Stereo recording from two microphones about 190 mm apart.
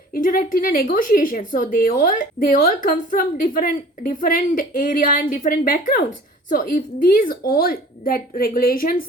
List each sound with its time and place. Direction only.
0.1 s a woman's voice: 50° left (ahead or behind)